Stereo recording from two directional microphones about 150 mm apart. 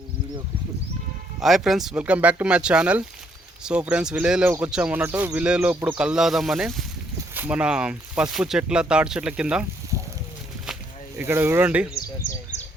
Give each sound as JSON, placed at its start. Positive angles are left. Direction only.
{"t": 1.4, "sound": "speech", "side_deg": 0}
{"t": 9.9, "sound": "a sound", "side_deg": 20}
{"t": 11.2, "sound": "speech", "side_deg": -15}